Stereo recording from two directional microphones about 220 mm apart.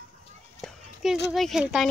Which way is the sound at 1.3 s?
Centre (ahead or behind).